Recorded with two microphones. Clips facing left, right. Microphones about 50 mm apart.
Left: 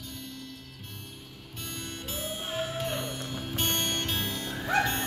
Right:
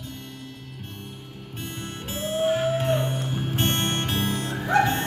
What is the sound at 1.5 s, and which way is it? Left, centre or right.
Music, right.